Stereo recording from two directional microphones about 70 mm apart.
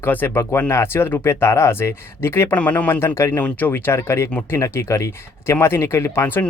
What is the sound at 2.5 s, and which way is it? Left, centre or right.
Speech, left.